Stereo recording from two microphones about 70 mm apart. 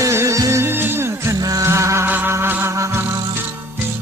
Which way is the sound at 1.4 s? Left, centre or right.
Right.